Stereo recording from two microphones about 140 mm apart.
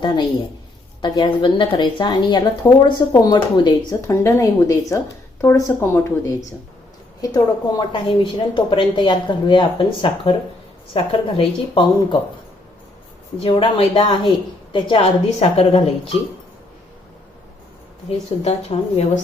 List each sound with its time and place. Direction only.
0.0 s a woman's voice: 30° left (ahead or behind)
4.0 s a woman's voice: 20° left (ahead or behind)
7.2 s a woman's voice: 25° left (ahead or behind)
13.4 s a woman's voice: 40° left (ahead or behind)
18.1 s a woman's voice: 50° left (ahead or behind)